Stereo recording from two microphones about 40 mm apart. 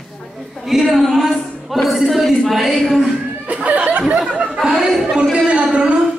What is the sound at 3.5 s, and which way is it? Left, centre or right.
Chuckle, right.